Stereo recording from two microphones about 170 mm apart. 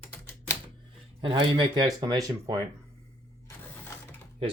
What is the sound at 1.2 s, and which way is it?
Speech, 30° right (ahead or behind).